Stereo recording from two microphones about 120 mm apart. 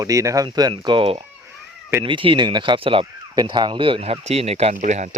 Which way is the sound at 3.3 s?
35° right (ahead or behind).